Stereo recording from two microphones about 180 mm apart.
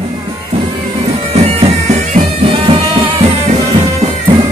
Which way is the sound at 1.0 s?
35° right (ahead or behind).